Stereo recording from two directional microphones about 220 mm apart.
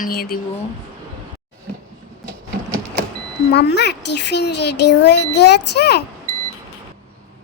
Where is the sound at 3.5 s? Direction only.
50° left (ahead or behind).